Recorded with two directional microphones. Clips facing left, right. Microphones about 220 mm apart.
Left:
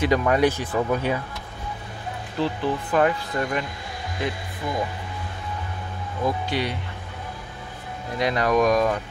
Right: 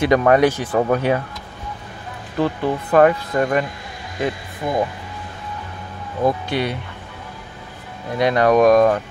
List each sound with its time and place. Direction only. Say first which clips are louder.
0.0 s speech: right 5 dB; 65° right (ahead or behind)
2.4 s speech: right 4 dB; 55° right (ahead or behind)
4.6 s speech: right 6 dB; 50° right (ahead or behind)
6.2 s speech: right 5 dB; 55° right (ahead or behind)
8.2 s speech: right 6 dB; 60° right (ahead or behind)